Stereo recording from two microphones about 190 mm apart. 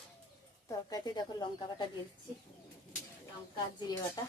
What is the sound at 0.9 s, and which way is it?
Speech, 20° left (ahead or behind).